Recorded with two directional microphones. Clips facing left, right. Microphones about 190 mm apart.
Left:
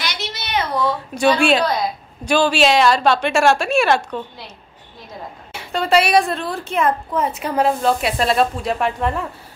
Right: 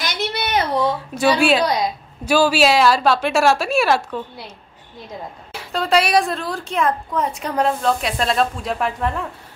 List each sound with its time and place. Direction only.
0.0 s a sound: 55° right (ahead or behind)
0.8 s a woman's voice: 5° right (ahead or behind)
5.5 s a woman's voice: centre (ahead or behind)